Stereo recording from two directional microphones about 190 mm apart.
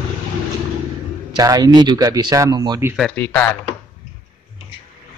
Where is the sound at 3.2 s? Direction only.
10° left (ahead or behind).